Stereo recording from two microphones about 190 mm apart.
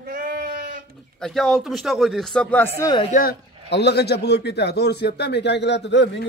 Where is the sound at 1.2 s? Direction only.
Centre (ahead or behind).